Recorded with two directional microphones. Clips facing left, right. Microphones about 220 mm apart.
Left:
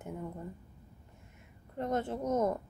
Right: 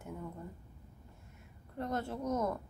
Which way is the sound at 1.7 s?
20° left (ahead or behind).